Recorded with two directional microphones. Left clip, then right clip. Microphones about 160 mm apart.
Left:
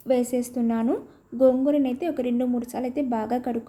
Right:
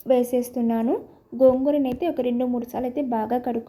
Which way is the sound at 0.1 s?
5° right (ahead or behind).